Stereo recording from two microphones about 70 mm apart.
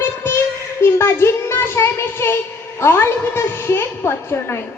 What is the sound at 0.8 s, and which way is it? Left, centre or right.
Child singing, left.